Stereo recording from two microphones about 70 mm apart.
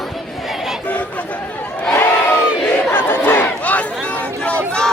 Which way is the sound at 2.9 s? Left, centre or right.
Left.